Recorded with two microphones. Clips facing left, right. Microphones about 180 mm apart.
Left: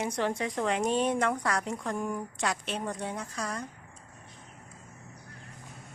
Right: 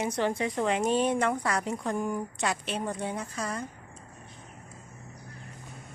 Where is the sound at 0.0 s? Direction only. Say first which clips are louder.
Right 2 dB; centre (ahead or behind).